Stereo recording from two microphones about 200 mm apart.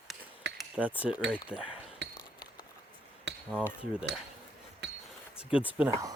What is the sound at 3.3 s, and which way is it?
Cutlery, 60° right (ahead or behind).